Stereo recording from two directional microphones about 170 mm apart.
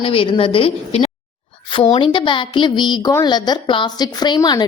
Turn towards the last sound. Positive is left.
turn(degrees=25)  # may be behind; listen again after turning